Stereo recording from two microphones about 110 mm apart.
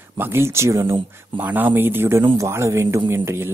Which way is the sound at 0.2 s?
20° right (ahead or behind).